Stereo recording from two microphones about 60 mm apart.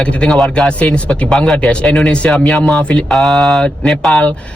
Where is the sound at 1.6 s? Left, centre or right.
Centre.